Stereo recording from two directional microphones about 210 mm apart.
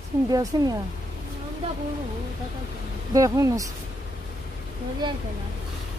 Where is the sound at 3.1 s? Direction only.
15° right (ahead or behind).